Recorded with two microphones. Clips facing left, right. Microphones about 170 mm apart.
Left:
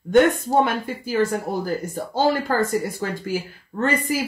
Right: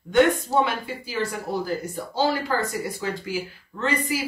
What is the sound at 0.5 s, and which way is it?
Speech, 50° left (ahead or behind).